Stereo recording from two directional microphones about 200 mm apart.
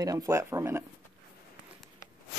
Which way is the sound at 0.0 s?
15° right (ahead or behind).